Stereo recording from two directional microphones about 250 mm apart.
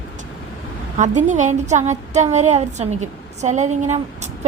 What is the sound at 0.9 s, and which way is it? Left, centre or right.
A woman's voice, right.